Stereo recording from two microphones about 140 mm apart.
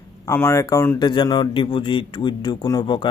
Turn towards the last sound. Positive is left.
turn(degrees=30)  # may be behind; listen again after turning